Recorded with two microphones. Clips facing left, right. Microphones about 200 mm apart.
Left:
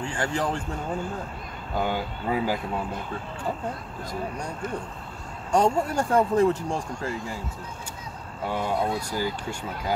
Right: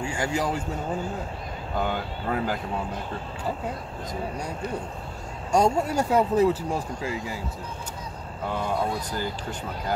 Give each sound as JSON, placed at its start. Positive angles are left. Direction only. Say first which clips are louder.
{"t": 0.0, "sound": "speech", "louder": "right 1 dB", "side_deg": -10}
{"t": 1.8, "sound": "speech", "louder": "left 1 dB", "side_deg": 5}
{"t": 5.5, "sound": "speech", "louder": "even", "side_deg": -10}
{"t": 8.5, "sound": "speech", "louder": "left 1 dB", "side_deg": 10}